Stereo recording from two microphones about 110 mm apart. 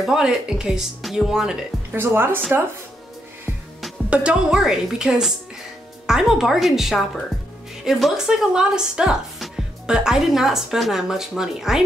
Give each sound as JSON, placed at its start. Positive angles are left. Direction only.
{"t": 0.0, "sound": "speech", "side_deg": -5}
{"t": 2.0, "sound": "speech", "side_deg": -20}
{"t": 4.1, "sound": "speech", "side_deg": -10}